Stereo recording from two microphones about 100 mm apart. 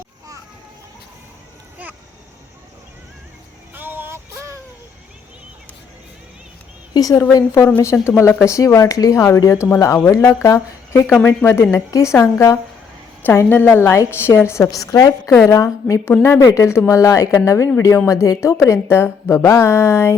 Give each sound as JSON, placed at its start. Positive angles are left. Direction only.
{"t": 3.8, "sound": "vehicle", "side_deg": -20}
{"t": 6.9, "sound": "a woman's voice", "side_deg": 40}